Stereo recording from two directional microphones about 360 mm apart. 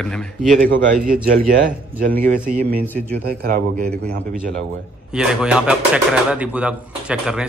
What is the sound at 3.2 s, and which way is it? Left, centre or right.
Speech, right.